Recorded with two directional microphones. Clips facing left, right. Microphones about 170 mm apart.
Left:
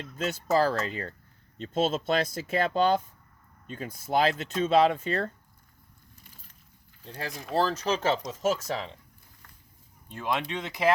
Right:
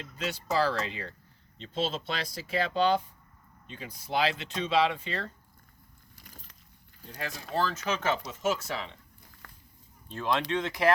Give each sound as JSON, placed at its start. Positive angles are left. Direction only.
{"t": 0.2, "sound": "speech", "side_deg": 45}
{"t": 7.1, "sound": "speech", "side_deg": 35}
{"t": 9.4, "sound": "a sound", "side_deg": -90}
{"t": 10.5, "sound": "speech", "side_deg": 15}